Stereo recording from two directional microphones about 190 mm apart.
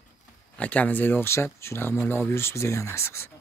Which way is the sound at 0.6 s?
5° left (ahead or behind).